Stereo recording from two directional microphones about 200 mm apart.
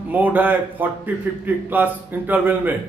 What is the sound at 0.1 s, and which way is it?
A man's voice, 10° right (ahead or behind).